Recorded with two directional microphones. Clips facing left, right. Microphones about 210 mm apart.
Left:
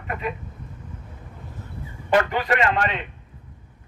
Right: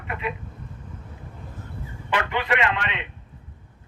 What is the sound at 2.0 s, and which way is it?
Speech, 40° left (ahead or behind).